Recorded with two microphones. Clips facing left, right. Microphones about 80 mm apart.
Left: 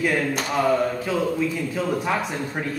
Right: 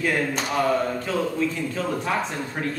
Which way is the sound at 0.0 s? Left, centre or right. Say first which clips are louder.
Left 1 dB; centre.